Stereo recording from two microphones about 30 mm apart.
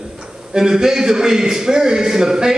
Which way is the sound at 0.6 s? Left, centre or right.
Right.